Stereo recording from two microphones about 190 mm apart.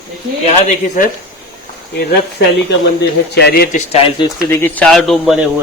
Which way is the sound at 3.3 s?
55° left (ahead or behind).